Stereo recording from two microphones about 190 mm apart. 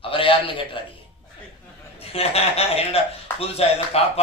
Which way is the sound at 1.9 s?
30° left (ahead or behind).